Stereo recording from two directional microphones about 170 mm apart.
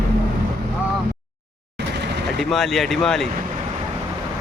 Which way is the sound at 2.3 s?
Centre (ahead or behind).